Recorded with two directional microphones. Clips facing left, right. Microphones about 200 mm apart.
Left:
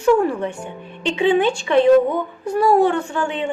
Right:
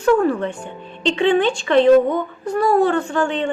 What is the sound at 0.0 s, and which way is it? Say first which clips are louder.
A woman's voice: even; 10° left (ahead or behind).